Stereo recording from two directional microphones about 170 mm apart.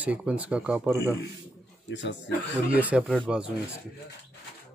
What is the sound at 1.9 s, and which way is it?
Speech, 90° left.